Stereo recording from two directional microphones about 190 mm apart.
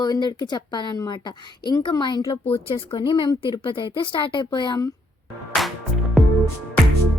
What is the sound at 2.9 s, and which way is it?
A woman's voice, 25° left (ahead or behind).